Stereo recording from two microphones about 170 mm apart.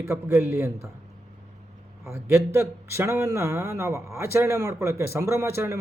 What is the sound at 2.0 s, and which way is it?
A man's voice, 15° right (ahead or behind).